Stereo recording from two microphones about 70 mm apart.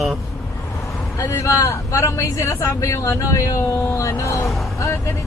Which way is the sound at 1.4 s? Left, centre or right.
Left.